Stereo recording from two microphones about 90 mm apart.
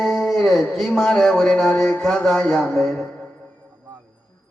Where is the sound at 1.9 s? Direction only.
10° left (ahead or behind).